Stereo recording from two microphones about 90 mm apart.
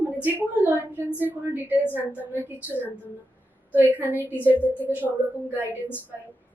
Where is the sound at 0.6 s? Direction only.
20° right (ahead or behind).